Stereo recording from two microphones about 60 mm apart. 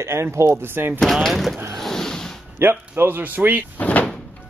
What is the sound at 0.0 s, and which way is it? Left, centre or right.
Speech, right.